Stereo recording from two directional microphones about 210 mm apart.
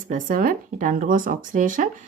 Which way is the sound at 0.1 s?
40° right (ahead or behind).